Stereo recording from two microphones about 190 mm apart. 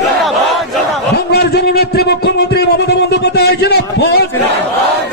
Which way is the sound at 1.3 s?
60° left (ahead or behind).